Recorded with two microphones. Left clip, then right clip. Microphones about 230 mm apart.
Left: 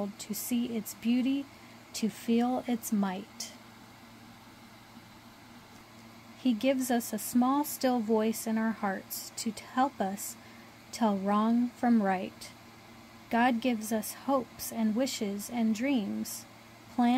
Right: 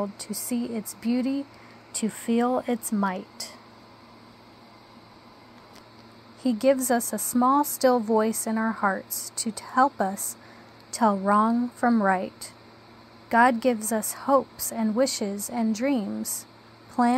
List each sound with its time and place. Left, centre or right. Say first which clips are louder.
0.2 s speech: right 4 dB; centre
1.0 s speech: right 3 dB; right
2.0 s speech: right 5 dB; centre
6.4 s speech: right 7 dB; centre